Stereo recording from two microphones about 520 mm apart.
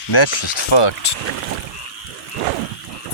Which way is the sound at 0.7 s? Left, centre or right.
Left.